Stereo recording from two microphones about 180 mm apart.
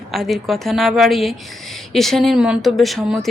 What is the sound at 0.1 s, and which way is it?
Speech, centre (ahead or behind).